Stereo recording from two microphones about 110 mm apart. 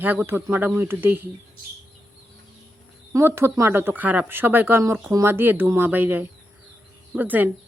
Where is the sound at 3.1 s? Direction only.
25° right (ahead or behind).